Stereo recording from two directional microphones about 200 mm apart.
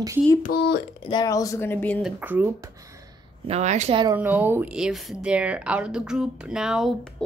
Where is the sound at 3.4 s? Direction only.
35° right (ahead or behind).